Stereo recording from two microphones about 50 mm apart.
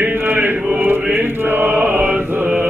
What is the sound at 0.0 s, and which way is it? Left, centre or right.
Chant, right.